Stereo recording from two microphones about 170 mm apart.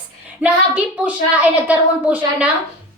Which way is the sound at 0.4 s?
5° right (ahead or behind).